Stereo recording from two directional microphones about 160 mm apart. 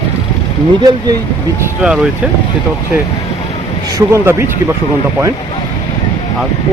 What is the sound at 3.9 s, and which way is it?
Speech, 15° right (ahead or behind).